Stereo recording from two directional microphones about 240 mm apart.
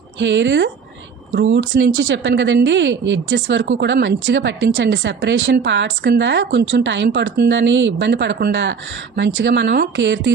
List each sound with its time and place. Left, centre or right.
0.2 s speech: right